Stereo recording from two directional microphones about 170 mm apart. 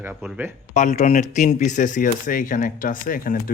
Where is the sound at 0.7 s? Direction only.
45° left (ahead or behind).